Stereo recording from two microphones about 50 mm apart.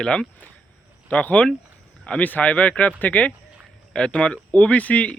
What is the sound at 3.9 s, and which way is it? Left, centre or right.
Speech, centre.